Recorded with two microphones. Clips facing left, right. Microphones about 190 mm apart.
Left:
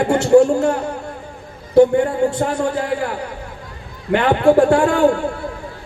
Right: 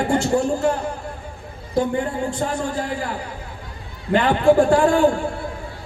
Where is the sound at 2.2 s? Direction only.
65° left (ahead or behind).